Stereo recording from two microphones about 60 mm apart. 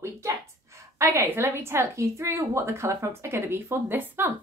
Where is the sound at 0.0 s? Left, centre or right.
Right.